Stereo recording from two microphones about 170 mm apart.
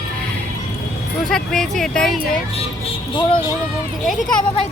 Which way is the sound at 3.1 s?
25° left (ahead or behind).